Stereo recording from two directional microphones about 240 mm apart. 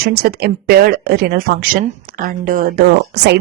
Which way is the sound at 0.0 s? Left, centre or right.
Right.